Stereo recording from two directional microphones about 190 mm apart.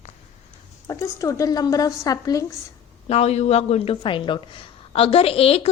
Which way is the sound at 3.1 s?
35° left (ahead or behind).